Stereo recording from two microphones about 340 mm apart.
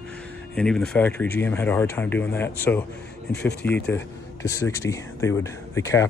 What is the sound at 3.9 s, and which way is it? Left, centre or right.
Speech, centre.